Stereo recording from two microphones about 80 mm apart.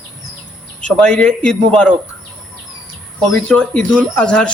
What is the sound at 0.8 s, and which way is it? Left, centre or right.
Speech, centre.